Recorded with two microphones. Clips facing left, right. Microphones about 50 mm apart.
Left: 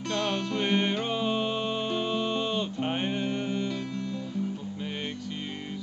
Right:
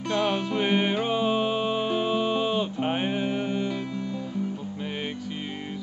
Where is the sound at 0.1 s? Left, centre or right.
Centre.